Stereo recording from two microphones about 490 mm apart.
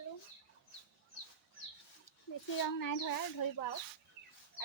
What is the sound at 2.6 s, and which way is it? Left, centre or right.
Speech, left.